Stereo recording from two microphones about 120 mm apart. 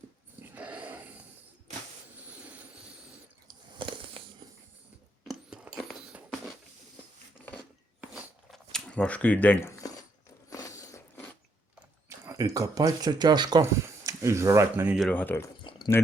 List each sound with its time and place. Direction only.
0.4 s dog: 15° right (ahead or behind)
2.2 s vehicle: 10° right (ahead or behind)
3.8 s a sound: 45° right (ahead or behind)
5.3 s a sound: 5° right (ahead or behind)
8.1 s biting: centre (ahead or behind); by 9.9 s 20° left (ahead or behind)
10.5 s a sound: 30° left (ahead or behind)
12.0 s speech: 25° right (ahead or behind)
13.6 s speech: 25° right (ahead or behind)
15.1 s speech: 15° left (ahead or behind)